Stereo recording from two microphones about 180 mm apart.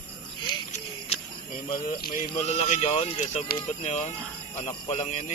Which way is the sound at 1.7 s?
50° left (ahead or behind).